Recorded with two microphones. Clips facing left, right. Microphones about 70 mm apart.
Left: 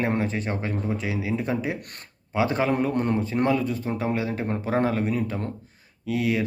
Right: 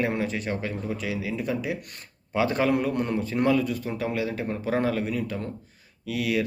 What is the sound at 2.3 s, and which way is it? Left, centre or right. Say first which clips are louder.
Speech: even; left.